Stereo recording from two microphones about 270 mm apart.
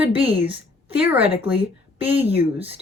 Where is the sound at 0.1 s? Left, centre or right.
Right.